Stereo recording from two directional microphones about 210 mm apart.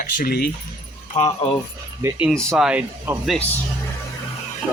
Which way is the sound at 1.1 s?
25° left (ahead or behind).